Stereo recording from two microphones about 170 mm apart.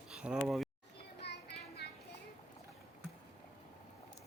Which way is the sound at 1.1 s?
80° left.